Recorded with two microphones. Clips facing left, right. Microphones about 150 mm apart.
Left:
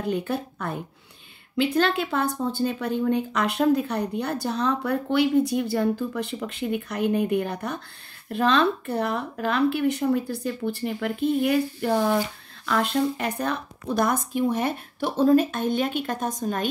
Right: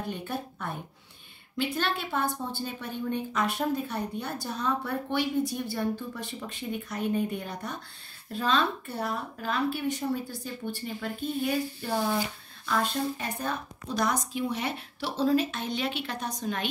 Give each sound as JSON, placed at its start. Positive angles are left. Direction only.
{"t": 0.1, "sound": "a woman's voice", "side_deg": 85}
{"t": 12.6, "sound": "speech", "side_deg": 80}